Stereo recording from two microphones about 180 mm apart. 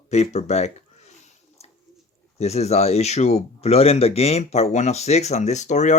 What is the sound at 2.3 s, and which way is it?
Speech, 35° left (ahead or behind).